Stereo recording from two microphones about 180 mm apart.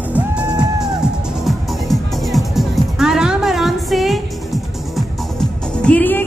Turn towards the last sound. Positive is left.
turn(degrees=10)  # may be behind; listen again after turning